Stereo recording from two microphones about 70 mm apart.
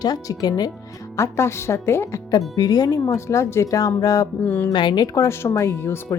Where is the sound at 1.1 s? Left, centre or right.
Left.